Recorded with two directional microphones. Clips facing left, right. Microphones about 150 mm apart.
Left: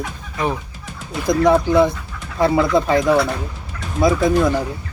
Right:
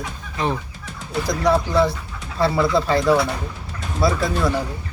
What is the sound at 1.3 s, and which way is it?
Speech, 20° left (ahead or behind).